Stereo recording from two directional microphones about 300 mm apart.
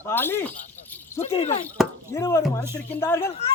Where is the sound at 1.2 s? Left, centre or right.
Centre.